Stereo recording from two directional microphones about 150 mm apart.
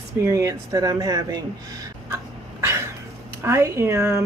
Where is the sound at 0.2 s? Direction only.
20° right (ahead or behind).